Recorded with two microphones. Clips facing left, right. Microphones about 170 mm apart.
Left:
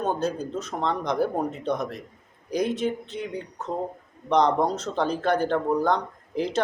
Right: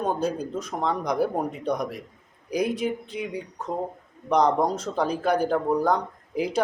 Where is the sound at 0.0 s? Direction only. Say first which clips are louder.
Even; 10° right (ahead or behind).